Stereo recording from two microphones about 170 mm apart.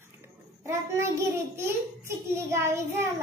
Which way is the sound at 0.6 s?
15° right (ahead or behind).